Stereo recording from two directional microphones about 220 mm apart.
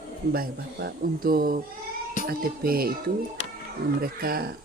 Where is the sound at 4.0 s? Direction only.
40° right (ahead or behind).